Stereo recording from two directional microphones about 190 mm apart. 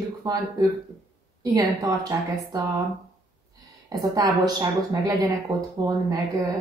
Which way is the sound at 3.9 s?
20° right (ahead or behind).